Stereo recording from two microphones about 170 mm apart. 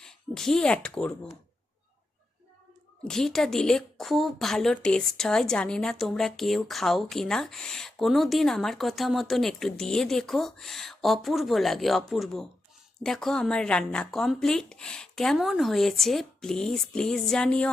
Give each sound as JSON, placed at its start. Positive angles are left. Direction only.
{"t": 0.0, "sound": "speech", "side_deg": 5}
{"t": 3.0, "sound": "a woman's voice", "side_deg": 5}